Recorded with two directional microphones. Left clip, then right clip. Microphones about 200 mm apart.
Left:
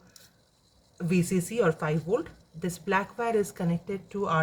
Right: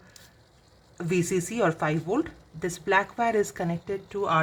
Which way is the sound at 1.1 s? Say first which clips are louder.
Right 1 dB; 45° right (ahead or behind).